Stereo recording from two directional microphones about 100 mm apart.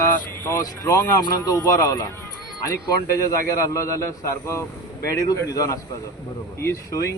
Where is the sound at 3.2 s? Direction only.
30° left (ahead or behind).